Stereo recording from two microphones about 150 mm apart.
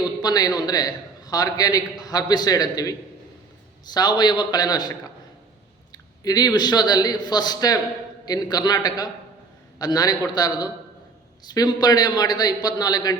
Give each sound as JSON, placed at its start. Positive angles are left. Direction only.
{"t": 0.2, "sound": "a man's voice", "side_deg": 25}